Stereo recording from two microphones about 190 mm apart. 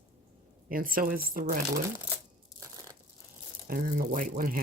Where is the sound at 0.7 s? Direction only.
50° right (ahead or behind).